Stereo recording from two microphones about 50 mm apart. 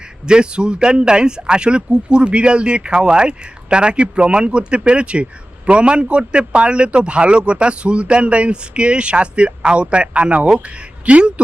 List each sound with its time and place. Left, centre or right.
0.3 s speech: centre